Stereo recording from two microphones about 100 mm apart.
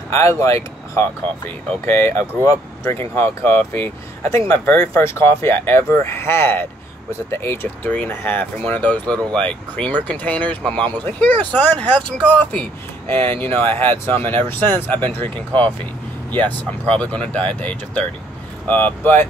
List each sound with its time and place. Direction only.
0.1 s speech: 25° left (ahead or behind)